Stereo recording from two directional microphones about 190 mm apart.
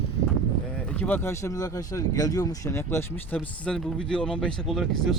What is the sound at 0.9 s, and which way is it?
Speech, 10° left (ahead or behind).